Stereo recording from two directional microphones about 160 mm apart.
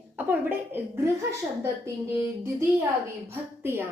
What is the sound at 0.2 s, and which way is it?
A woman's voice, 10° right (ahead or behind).